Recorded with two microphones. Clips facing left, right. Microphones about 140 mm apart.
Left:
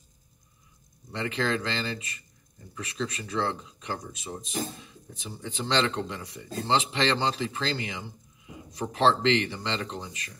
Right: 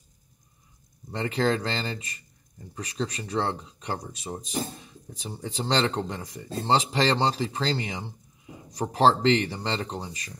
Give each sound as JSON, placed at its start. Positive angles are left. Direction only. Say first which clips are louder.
{"t": 1.1, "sound": "speech", "louder": "right 3 dB", "side_deg": -40}